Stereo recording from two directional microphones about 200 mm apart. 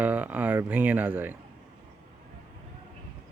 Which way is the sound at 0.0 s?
10° right (ahead or behind).